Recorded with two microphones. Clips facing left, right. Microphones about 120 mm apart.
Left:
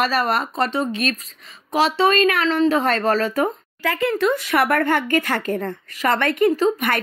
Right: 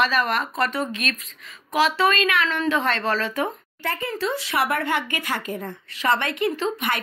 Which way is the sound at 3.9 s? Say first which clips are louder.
Left 7 dB; 85° left.